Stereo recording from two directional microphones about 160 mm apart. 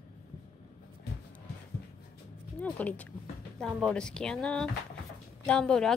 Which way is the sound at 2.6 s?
10° left (ahead or behind).